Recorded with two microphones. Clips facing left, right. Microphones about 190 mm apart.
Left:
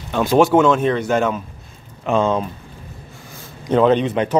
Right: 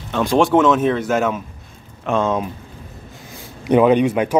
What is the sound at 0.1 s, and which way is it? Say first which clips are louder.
A man's voice: left 1 dB; centre (ahead or behind).